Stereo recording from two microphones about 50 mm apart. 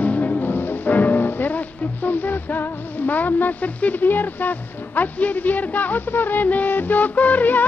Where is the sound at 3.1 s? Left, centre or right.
Left.